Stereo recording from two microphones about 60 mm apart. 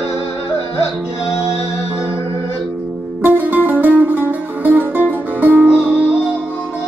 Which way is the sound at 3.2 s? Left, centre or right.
Right.